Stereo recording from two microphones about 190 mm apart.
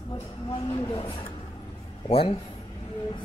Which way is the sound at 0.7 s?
25° left (ahead or behind).